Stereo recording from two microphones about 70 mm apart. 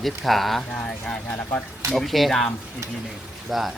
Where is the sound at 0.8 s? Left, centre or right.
Centre.